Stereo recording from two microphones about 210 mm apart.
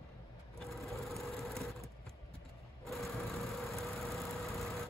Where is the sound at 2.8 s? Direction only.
Centre (ahead or behind).